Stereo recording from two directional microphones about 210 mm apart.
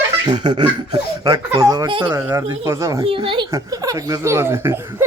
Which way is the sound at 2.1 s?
10° right (ahead or behind).